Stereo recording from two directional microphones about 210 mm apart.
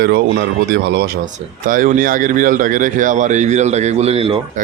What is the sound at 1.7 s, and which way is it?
A man's voice, 40° right (ahead or behind).